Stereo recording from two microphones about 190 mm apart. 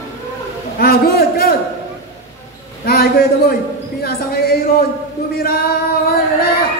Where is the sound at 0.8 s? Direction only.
55° left (ahead or behind).